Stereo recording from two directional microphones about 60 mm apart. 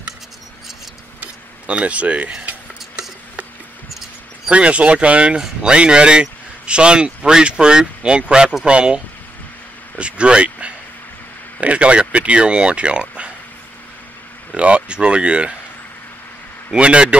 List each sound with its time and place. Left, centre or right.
1.2 s mechanisms: right
4.5 s speech: centre
9.9 s a sound: centre
11.6 s speech: right
14.5 s speech: centre
16.7 s speech: centre